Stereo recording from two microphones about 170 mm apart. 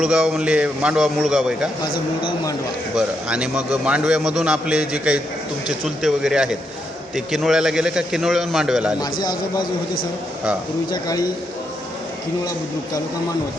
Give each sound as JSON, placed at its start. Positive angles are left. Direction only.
{"t": 0.0, "sound": "a man's voice", "side_deg": -5}
{"t": 2.2, "sound": "a man's voice", "side_deg": 20}
{"t": 2.9, "sound": "a man's voice", "side_deg": -5}
{"t": 9.2, "sound": "a man's voice", "side_deg": 25}
{"t": 10.9, "sound": "a man's voice", "side_deg": 25}